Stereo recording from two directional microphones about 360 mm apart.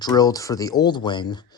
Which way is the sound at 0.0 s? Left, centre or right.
Centre.